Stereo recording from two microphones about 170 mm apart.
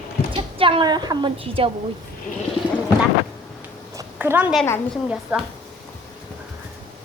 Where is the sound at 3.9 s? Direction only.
10° right (ahead or behind).